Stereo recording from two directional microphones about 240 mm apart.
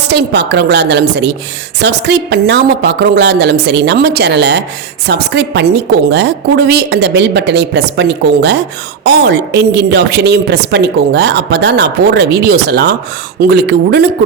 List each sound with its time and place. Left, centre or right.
0.1 s a woman's voice: right